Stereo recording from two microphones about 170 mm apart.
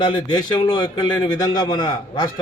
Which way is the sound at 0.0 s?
30° left (ahead or behind).